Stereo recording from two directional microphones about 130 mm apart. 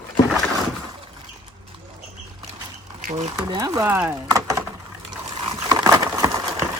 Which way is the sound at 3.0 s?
65° right (ahead or behind).